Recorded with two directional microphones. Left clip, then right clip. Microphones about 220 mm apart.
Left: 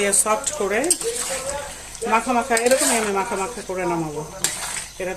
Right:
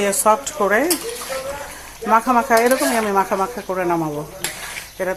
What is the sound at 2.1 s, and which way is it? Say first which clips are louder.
Speech: right 5 dB; 15° right (ahead or behind).